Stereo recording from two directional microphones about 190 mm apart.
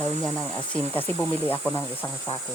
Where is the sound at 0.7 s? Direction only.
10° left (ahead or behind).